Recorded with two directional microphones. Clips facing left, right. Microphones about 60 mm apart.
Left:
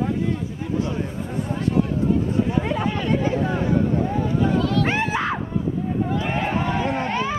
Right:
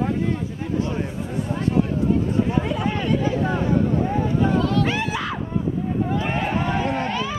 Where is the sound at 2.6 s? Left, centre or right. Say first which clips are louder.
Even; left.